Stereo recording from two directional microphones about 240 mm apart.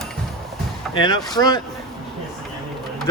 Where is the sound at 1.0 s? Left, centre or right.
Centre.